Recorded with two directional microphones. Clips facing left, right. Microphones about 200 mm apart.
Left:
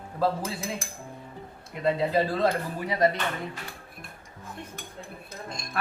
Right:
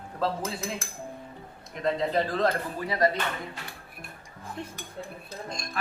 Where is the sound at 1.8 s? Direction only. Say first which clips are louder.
Left 2 dB; 10° left (ahead or behind).